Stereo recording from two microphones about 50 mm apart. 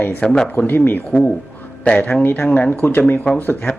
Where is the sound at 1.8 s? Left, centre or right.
Left.